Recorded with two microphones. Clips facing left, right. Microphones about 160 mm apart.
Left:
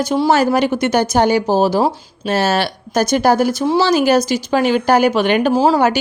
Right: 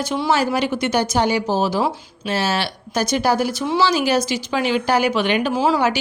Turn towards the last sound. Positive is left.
turn(degrees=45)  # may be behind; listen again after turning